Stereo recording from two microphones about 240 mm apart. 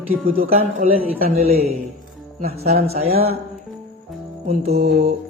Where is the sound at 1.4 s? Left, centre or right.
Right.